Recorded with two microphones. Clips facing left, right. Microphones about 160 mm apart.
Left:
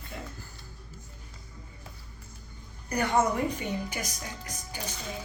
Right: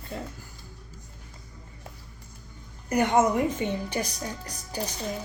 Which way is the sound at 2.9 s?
25° right (ahead or behind).